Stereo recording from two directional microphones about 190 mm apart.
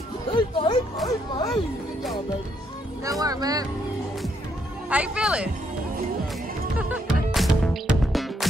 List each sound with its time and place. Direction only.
0.3 s speech: 25° left (ahead or behind)
3.0 s speech: 20° right (ahead or behind)
4.8 s speech: 5° right (ahead or behind)
6.8 s music: 5° right (ahead or behind)